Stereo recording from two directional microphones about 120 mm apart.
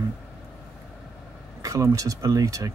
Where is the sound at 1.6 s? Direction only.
30° right (ahead or behind).